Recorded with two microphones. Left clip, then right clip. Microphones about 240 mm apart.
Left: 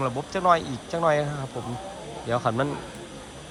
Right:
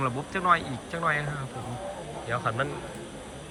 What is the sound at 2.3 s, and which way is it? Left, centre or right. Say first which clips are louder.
Speech: left 4 dB; left.